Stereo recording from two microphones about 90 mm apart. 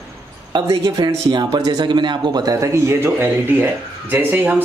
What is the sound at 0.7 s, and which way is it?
Speech, 40° right (ahead or behind).